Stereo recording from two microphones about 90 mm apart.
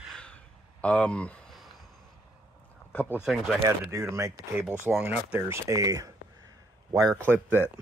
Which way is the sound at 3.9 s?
35° right (ahead or behind).